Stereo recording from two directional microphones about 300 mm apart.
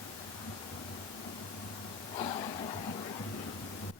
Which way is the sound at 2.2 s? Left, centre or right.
Centre.